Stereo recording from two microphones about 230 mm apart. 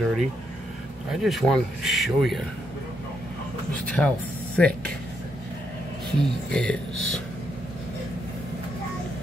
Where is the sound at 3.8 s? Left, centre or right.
Centre.